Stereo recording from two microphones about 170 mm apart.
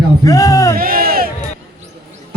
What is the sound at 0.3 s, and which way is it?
Speech, 20° left (ahead or behind).